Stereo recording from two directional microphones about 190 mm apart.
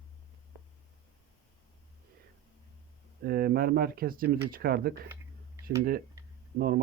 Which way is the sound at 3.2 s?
50° right (ahead or behind).